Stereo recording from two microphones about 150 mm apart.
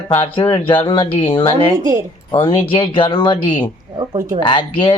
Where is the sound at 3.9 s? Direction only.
25° right (ahead or behind).